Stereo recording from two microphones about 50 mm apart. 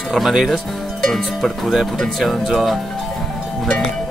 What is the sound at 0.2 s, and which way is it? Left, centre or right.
Speech, centre.